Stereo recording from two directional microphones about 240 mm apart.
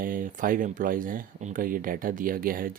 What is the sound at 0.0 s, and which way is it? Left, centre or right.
Speech, right.